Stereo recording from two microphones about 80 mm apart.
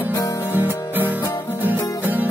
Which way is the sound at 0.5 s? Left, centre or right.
Right.